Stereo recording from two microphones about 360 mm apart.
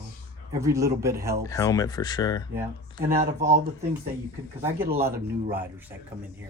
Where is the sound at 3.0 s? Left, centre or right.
Right.